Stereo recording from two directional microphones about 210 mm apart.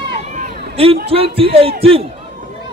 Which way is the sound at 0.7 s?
30° right (ahead or behind).